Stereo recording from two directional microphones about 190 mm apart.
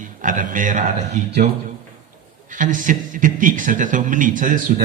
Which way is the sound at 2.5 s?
45° right (ahead or behind).